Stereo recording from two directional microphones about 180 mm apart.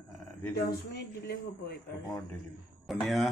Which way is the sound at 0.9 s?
60° left (ahead or behind).